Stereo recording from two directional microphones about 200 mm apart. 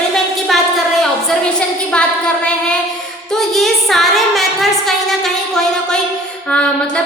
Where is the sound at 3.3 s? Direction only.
Centre (ahead or behind).